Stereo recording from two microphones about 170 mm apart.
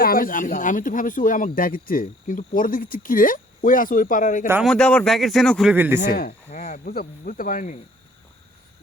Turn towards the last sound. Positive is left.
turn(degrees=50)  # may be behind; listen again after turning